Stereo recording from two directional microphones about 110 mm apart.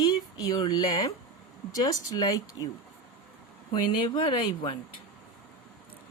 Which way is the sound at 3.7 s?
45° left (ahead or behind).